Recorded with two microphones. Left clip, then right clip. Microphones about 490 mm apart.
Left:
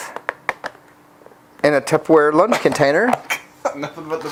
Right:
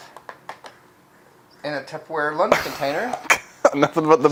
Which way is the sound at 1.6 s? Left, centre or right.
Left.